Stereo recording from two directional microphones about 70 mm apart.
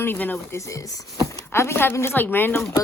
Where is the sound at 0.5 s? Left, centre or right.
Left.